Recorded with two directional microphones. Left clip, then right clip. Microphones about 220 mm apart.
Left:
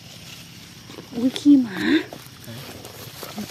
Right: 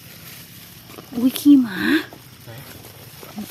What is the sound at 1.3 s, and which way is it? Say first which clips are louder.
Speech: right 2 dB; 25° right (ahead or behind).